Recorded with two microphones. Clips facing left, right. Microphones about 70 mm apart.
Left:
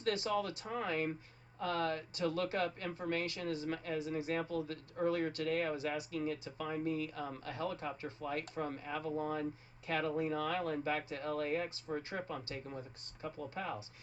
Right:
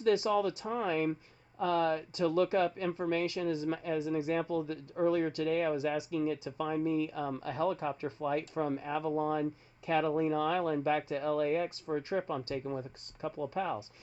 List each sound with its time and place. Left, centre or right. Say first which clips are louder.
0.0 s speech: right 7 dB; right
13.5 s speech: right 7 dB; right